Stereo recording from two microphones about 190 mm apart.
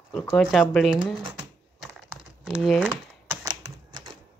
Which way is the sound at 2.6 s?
Centre (ahead or behind).